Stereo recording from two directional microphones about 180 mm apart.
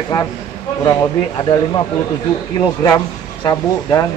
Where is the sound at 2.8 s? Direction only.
15° left (ahead or behind).